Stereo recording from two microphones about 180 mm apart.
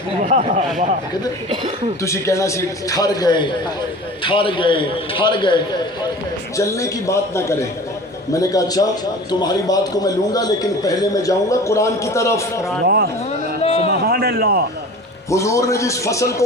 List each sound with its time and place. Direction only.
0.3 s speech: 40° right (ahead or behind)
2.0 s a man's voice: 15° left (ahead or behind)
12.8 s speech: 60° right (ahead or behind)
13.6 s a sound: 35° left (ahead or behind)
13.9 s a sound: 60° right (ahead or behind)
15.3 s a man's voice: 15° left (ahead or behind)